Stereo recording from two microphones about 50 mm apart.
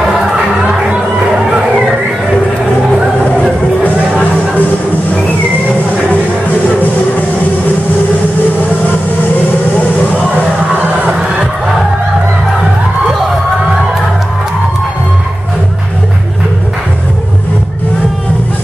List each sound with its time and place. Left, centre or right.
0.6 s music: centre
3.8 s music: left